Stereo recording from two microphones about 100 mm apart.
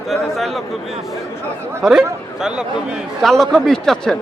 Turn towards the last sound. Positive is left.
turn(degrees=5)  # may be behind; listen again after turning